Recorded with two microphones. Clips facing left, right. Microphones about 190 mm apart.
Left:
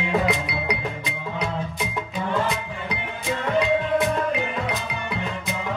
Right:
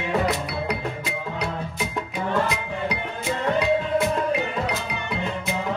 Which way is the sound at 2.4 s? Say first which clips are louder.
Right 1 dB; centre (ahead or behind).